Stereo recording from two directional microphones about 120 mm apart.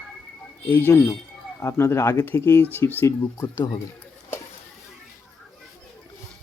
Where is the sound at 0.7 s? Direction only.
15° left (ahead or behind).